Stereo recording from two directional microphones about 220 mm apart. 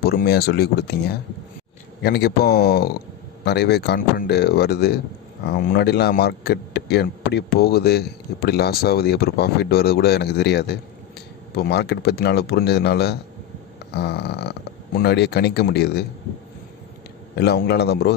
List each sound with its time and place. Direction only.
0.0 s speech: 45° left (ahead or behind)
17.4 s speech: 45° left (ahead or behind)